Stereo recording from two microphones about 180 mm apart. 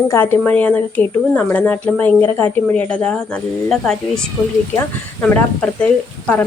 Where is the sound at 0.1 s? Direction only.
10° left (ahead or behind).